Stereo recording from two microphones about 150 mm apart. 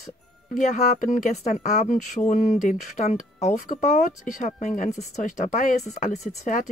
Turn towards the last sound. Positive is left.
turn(degrees=55)  # may be behind; listen again after turning